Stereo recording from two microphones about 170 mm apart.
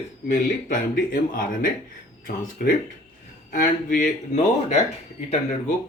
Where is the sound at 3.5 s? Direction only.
55° left (ahead or behind).